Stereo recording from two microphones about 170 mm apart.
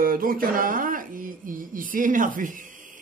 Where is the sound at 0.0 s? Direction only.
55° right (ahead or behind).